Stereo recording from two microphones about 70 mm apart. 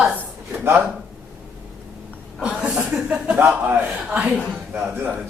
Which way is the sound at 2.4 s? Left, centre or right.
Centre.